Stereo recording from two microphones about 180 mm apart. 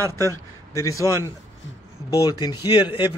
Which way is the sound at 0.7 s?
20° left (ahead or behind).